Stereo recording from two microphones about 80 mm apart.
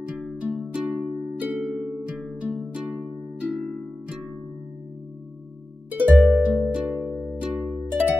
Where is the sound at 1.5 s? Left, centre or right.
Centre.